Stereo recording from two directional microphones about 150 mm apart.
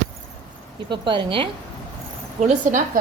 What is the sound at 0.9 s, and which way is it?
Speech, 35° right (ahead or behind).